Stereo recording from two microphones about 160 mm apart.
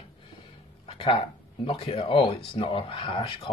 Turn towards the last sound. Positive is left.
turn(degrees=30)  # may be behind; listen again after turning